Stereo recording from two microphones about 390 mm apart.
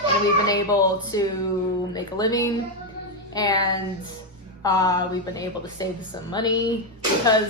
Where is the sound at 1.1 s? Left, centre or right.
Centre.